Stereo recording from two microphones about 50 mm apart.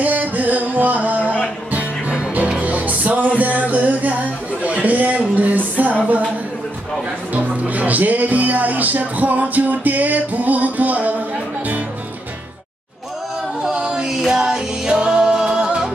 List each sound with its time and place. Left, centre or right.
0.0 s music: right
4.6 s a sound: right
7.3 s music: right
13.6 s music: centre